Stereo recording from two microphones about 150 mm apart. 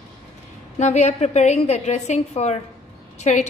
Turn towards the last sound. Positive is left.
turn(degrees=50)  # may be behind; listen again after turning